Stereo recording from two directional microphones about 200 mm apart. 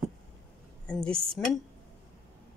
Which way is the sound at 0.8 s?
5° left (ahead or behind).